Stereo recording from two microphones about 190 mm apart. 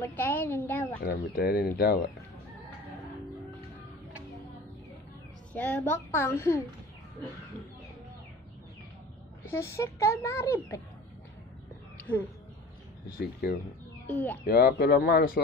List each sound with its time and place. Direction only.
0.0 s speech: 10° left (ahead or behind)
1.0 s speech: 55° left (ahead or behind)
5.5 s speech: 10° left (ahead or behind)
9.4 s speech: 15° left (ahead or behind)
12.1 s speech: 5° left (ahead or behind)
13.2 s speech: 55° left (ahead or behind)
14.0 s speech: 10° left (ahead or behind)
14.4 s speech: 55° left (ahead or behind)